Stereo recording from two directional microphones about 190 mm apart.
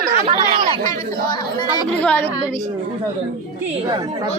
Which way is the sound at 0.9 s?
25° left (ahead or behind).